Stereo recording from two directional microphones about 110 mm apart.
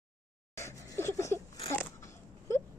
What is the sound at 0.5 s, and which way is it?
Speech, 25° left (ahead or behind).